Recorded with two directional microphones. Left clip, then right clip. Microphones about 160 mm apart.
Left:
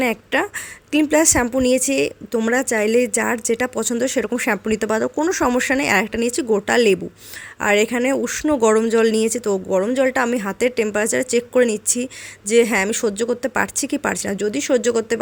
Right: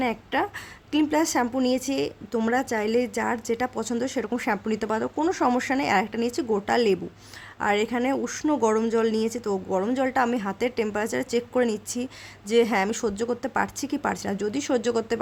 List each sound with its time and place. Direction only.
0.0 s a woman's voice: 20° left (ahead or behind)